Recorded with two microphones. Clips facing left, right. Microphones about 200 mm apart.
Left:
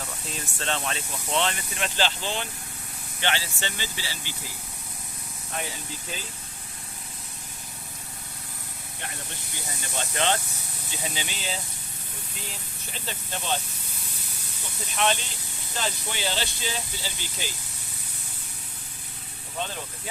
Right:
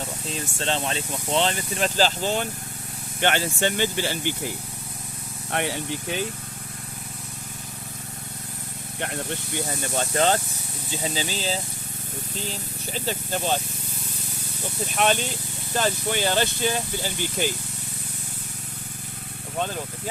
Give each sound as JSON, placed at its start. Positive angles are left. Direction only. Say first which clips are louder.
{"t": 0.0, "sound": "speech", "louder": "right 5 dB", "side_deg": -30}
{"t": 5.5, "sound": "speech", "louder": "right 8 dB", "side_deg": -70}
{"t": 9.0, "sound": "speech", "louder": "right 10 dB", "side_deg": -60}
{"t": 10.2, "sound": "speech", "louder": "right 4 dB", "side_deg": -40}
{"t": 14.9, "sound": "speech", "louder": "right 3 dB", "side_deg": -50}